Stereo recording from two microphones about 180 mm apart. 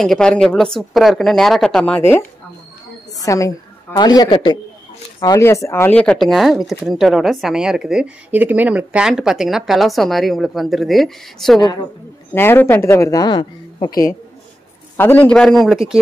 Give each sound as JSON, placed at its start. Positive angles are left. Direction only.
{"t": 0.0, "sound": "speech", "side_deg": 5}
{"t": 3.3, "sound": "a woman's voice", "side_deg": 20}
{"t": 11.6, "sound": "a woman's voice", "side_deg": 20}
{"t": 15.0, "sound": "speech", "side_deg": 10}